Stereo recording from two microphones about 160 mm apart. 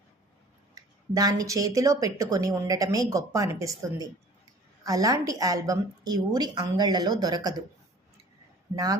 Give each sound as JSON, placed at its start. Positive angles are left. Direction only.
{"t": 0.8, "sound": "a woman's voice", "side_deg": -25}
{"t": 8.7, "sound": "a woman's voice", "side_deg": -20}